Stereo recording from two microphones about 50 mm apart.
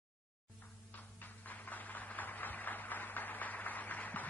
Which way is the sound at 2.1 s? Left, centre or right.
Left.